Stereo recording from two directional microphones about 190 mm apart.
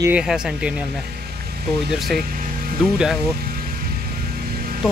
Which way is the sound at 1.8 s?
Centre (ahead or behind).